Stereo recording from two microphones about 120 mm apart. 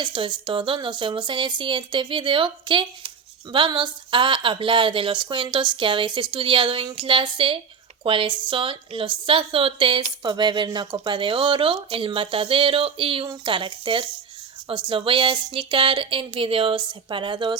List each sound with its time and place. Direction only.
0.0 s a woman's voice: 40° right (ahead or behind)